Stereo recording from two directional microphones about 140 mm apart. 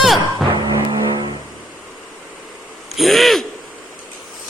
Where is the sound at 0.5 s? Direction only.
30° right (ahead or behind).